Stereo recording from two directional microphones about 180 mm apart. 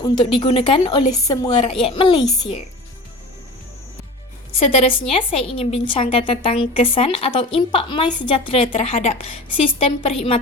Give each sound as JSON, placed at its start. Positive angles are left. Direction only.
{"t": 0.0, "sound": "a woman's voice", "side_deg": 25}
{"t": 4.9, "sound": "a woman's voice", "side_deg": 30}